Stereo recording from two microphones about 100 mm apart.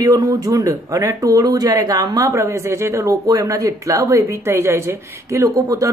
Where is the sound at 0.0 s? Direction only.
35° right (ahead or behind).